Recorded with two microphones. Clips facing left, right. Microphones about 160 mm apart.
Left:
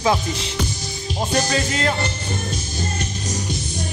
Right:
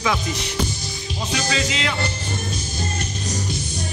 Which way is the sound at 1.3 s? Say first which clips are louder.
Left 2 dB; 50° left (ahead or behind).